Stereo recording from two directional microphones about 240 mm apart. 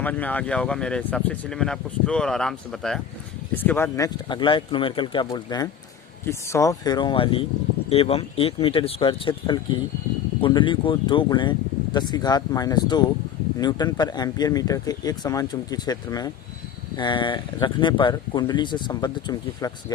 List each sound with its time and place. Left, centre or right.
0.0 s speech: centre